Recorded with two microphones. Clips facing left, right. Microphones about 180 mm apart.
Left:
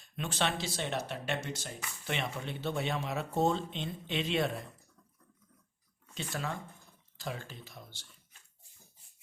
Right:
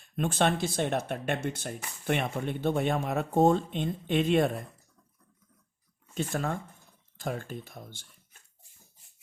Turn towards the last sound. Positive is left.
turn(degrees=-50)  # may be behind; listen again after turning